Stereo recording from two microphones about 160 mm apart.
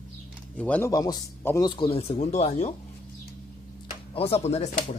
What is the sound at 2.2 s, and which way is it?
Speech, 45° left (ahead or behind).